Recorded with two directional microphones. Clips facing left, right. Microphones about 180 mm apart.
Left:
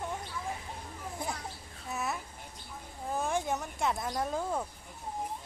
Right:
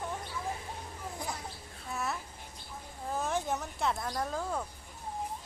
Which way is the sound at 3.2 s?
10° left (ahead or behind).